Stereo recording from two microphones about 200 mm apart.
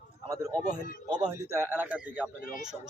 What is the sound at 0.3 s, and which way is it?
A man's voice, 15° right (ahead or behind).